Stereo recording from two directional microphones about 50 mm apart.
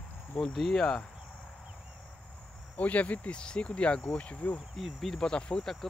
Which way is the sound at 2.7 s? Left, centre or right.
Left.